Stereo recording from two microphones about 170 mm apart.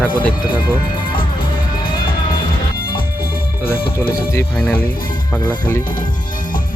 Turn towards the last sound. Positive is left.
turn(degrees=10)  # may be behind; listen again after turning